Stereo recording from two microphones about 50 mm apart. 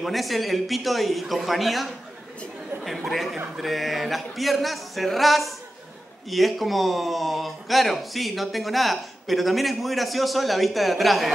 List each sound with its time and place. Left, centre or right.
0.0 s a man's voice: centre
3.1 s a man's voice: centre